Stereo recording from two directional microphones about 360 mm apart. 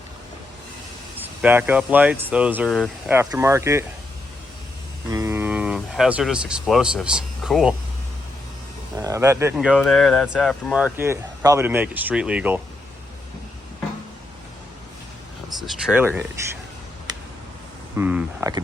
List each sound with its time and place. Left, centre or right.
1.2 s speech: centre
5.0 s speech: centre
9.0 s speech: centre
15.6 s speech: centre
17.9 s speech: centre